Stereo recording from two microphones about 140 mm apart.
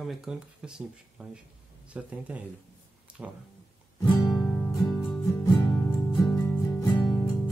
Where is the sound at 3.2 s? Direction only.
10° right (ahead or behind).